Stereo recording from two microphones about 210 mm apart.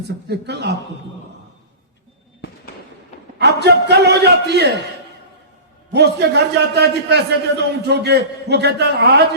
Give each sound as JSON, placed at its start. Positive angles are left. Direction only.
{"t": 0.3, "sound": "a man's voice", "side_deg": -55}
{"t": 3.3, "sound": "a man's voice", "side_deg": -50}
{"t": 5.9, "sound": "a man's voice", "side_deg": -55}